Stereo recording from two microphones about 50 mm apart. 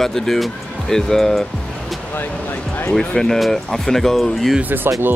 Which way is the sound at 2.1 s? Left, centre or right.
Left.